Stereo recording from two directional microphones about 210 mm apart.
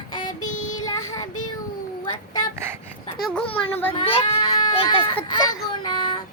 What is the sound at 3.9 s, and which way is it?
Speech, 30° left (ahead or behind).